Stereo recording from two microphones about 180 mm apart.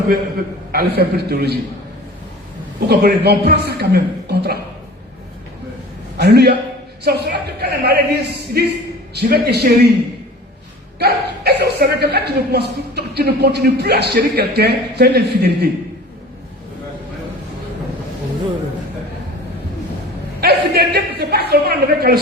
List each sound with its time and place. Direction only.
0.7 s speech: 60° right (ahead or behind)
2.9 s speech: 65° right (ahead or behind)
6.1 s speech: 65° right (ahead or behind)
11.0 s speech: 65° right (ahead or behind)
20.4 s a woman's voice: 65° right (ahead or behind)